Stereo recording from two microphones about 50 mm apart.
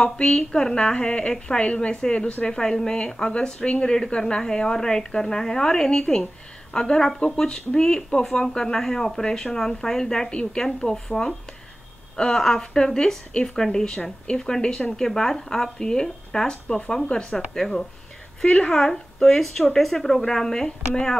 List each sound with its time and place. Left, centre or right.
0.0 s speech: centre